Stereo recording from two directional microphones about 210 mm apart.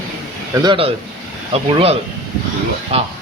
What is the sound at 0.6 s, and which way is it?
Speech, 25° right (ahead or behind).